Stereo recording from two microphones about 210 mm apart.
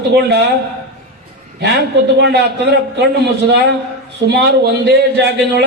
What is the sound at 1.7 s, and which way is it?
Speech, 55° right (ahead or behind).